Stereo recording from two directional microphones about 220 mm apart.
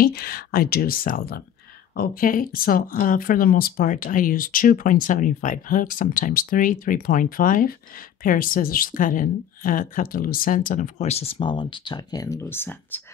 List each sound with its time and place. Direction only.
0.0 s speech: 45° left (ahead or behind); by 13.0 s 10° left (ahead or behind)